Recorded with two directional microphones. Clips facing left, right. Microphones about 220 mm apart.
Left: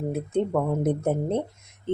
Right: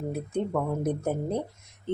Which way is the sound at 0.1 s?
20° left (ahead or behind).